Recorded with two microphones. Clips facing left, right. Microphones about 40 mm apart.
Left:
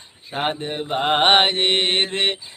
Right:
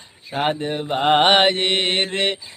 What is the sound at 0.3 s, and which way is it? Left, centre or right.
Male singing, centre.